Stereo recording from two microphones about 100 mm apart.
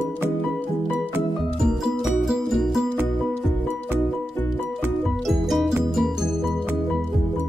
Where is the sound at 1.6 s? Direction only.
Centre (ahead or behind).